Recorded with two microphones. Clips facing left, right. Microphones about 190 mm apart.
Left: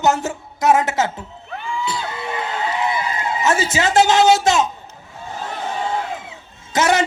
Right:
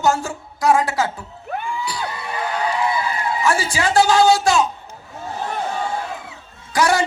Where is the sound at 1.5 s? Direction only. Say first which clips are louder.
Right 4 dB; 55° right (ahead or behind).